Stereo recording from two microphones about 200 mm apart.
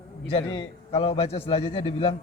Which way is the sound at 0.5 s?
25° left (ahead or behind).